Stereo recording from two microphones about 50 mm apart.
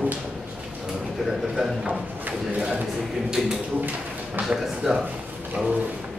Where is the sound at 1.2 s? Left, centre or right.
Centre.